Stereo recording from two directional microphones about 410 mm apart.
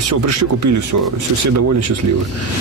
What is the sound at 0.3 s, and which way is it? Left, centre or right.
Speech, right.